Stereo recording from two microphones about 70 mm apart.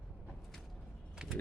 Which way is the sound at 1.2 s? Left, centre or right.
Centre.